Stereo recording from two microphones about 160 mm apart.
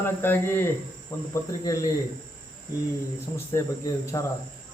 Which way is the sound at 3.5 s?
20° left (ahead or behind).